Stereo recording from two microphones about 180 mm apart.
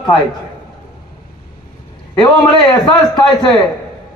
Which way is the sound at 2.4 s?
25° left (ahead or behind).